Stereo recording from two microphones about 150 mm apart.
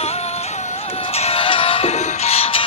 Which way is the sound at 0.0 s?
45° left (ahead or behind).